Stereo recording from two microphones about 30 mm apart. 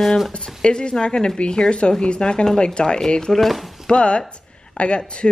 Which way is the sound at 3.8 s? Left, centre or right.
Left.